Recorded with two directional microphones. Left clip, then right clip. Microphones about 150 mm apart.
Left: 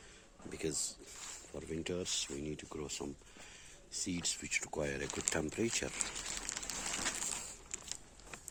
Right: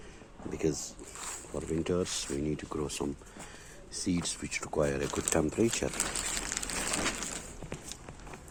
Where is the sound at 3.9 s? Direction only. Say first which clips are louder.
Right 5 dB; 35° left (ahead or behind).